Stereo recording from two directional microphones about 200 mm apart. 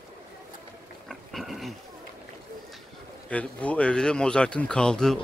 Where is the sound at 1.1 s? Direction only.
Centre (ahead or behind).